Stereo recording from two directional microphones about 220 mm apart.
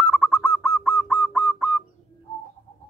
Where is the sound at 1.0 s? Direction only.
Centre (ahead or behind).